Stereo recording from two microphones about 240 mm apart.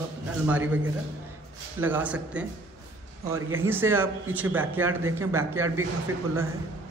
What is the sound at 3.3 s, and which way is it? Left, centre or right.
Speech, right.